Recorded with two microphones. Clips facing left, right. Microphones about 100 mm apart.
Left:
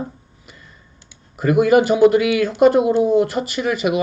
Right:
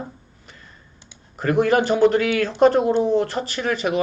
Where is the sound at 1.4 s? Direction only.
10° left (ahead or behind).